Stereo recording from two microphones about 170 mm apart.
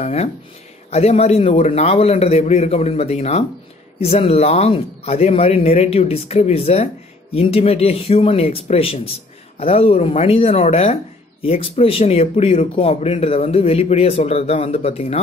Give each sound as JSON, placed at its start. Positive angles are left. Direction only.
{"t": 0.0, "sound": "speech", "side_deg": 35}